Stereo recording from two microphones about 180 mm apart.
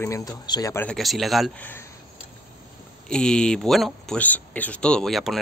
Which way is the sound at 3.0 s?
5° left (ahead or behind).